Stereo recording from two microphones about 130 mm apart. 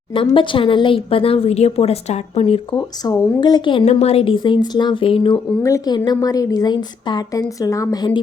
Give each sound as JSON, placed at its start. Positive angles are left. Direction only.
{"t": 0.1, "sound": "a woman's voice", "side_deg": 40}
{"t": 2.7, "sound": "speech", "side_deg": 30}
{"t": 3.8, "sound": "a woman's voice", "side_deg": 55}
{"t": 5.6, "sound": "a woman's voice", "side_deg": 25}